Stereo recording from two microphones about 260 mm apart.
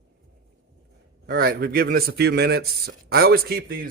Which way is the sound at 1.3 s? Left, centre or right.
Right.